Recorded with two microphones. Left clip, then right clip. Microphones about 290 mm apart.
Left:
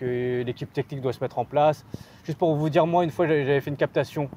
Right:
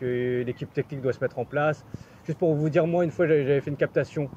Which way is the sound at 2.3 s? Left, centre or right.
Left.